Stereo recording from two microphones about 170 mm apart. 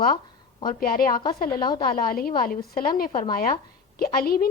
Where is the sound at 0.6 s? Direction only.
60° left (ahead or behind).